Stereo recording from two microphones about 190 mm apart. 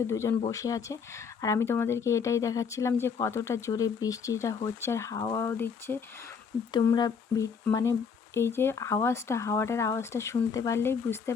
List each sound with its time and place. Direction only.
0.1 s speech: 15° left (ahead or behind)